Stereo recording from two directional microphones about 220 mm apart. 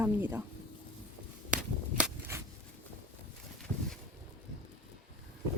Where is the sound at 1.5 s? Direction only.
5° right (ahead or behind).